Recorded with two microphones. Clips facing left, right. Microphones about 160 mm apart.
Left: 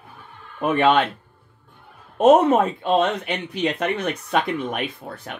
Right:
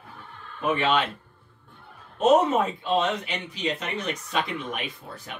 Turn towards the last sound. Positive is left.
turn(degrees=55)  # may be behind; listen again after turning